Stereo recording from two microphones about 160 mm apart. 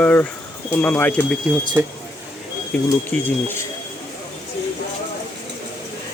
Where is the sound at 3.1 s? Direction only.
10° left (ahead or behind).